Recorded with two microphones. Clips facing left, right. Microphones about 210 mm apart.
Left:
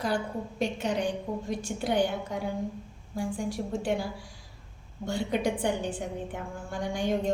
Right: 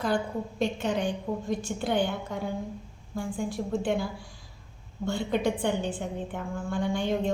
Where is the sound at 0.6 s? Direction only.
10° left (ahead or behind).